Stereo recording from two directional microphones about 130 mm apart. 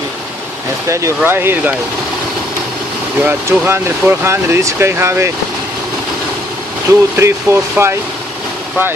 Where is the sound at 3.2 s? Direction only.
15° right (ahead or behind).